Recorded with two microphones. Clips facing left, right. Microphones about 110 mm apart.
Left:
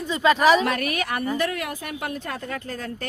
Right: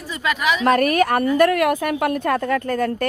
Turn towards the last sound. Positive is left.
turn(degrees=-55)  # may be behind; listen again after turning